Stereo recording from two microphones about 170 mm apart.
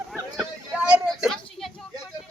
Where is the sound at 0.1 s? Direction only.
5° right (ahead or behind).